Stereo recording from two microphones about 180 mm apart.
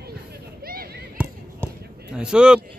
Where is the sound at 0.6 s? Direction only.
55° right (ahead or behind).